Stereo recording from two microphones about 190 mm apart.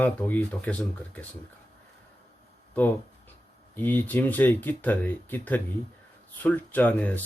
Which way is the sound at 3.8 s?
10° left (ahead or behind).